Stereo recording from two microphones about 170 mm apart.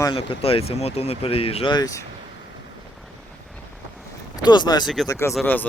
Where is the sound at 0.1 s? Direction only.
35° left (ahead or behind).